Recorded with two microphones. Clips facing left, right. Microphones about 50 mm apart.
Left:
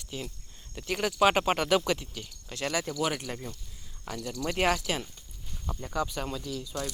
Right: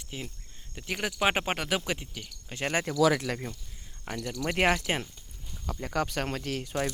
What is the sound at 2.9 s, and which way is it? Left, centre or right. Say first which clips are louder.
Speech: right 6 dB; right.